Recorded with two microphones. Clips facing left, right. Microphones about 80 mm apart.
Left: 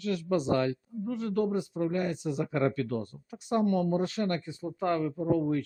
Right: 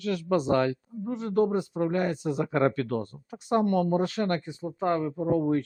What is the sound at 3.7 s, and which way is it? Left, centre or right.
Speech, right.